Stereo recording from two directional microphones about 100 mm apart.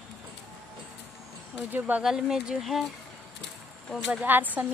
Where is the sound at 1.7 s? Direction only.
15° right (ahead or behind).